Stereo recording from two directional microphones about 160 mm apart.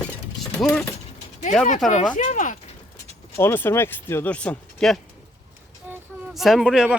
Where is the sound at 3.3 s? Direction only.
15° left (ahead or behind).